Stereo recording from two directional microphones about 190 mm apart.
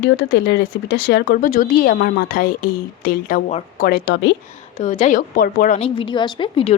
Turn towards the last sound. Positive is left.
turn(degrees=30)  # may be behind; listen again after turning